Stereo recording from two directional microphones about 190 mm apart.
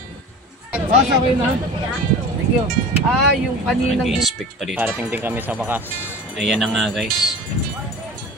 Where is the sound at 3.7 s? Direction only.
Centre (ahead or behind).